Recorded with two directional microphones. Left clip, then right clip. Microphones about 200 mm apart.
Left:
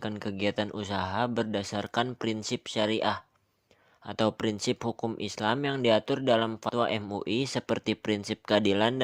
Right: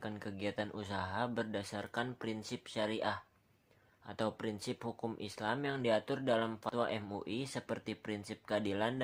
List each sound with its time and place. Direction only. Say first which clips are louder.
0.0 s speech: left 10 dB; 35° left (ahead or behind)